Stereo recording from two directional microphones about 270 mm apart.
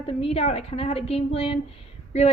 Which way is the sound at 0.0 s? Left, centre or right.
Left.